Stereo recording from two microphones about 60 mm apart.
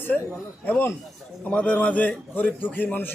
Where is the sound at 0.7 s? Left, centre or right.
Left.